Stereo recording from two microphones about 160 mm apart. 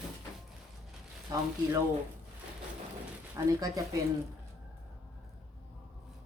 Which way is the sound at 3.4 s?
25° right (ahead or behind).